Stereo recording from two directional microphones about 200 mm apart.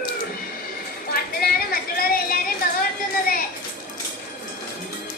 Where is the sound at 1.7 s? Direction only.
45° left (ahead or behind).